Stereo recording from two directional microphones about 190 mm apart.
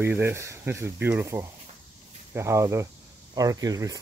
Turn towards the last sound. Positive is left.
turn(degrees=-20)  # may be behind; listen again after turning